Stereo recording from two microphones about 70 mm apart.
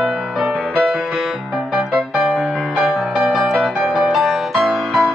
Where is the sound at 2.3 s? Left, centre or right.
Centre.